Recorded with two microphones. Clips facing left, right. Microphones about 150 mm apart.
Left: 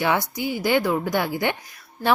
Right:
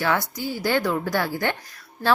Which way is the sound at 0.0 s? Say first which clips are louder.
Left 1 dB; 15° left (ahead or behind).